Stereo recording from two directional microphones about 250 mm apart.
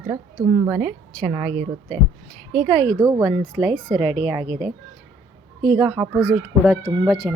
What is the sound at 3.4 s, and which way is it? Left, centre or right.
Speech, right.